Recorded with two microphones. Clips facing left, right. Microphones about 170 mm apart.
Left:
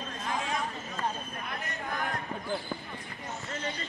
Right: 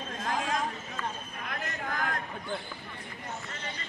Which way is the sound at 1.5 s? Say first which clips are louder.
Right 2 dB; 90° right.